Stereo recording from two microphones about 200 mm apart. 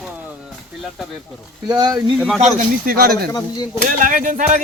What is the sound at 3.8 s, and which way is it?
Speech, 40° right (ahead or behind).